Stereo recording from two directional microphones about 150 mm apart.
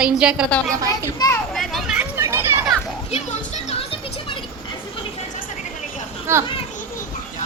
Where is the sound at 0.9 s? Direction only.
20° left (ahead or behind).